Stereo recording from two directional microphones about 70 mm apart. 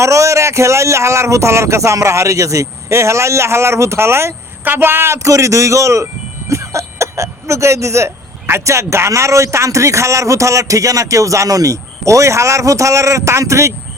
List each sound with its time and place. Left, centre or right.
0.0 s speech: right